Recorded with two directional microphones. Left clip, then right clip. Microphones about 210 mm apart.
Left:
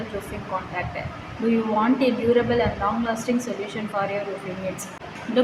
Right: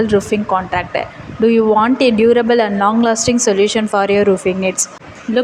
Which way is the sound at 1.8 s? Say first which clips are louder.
Right 10 dB; 45° right (ahead or behind).